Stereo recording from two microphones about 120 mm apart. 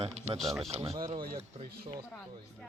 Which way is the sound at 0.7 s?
60° right (ahead or behind).